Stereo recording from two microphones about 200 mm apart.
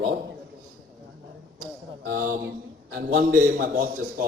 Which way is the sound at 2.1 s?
45° right (ahead or behind).